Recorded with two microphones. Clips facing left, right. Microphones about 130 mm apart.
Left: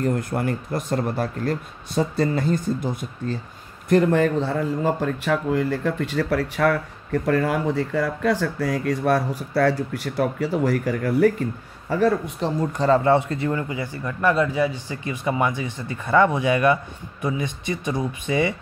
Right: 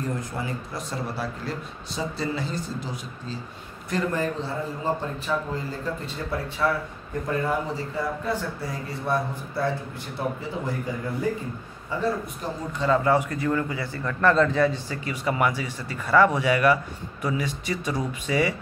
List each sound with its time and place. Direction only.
0.0 s speech: 60° left (ahead or behind)
12.7 s speech: 35° left (ahead or behind); by 15.0 s 10° left (ahead or behind)
15.0 s speech: 25° left (ahead or behind)